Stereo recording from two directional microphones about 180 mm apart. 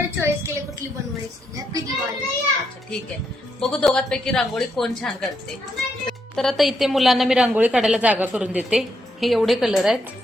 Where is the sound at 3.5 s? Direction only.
Centre (ahead or behind).